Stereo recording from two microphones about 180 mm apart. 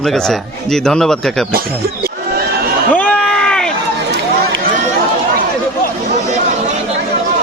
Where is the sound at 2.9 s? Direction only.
5° left (ahead or behind).